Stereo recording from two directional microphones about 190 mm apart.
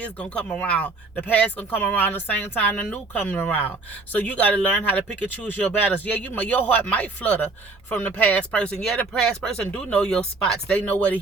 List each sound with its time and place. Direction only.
0.0 s speech: 5° left (ahead or behind)